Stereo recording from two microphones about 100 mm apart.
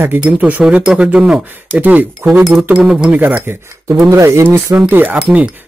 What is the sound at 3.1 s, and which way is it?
Speech, 20° right (ahead or behind).